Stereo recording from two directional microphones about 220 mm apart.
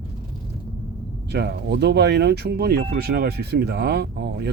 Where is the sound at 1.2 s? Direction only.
45° right (ahead or behind).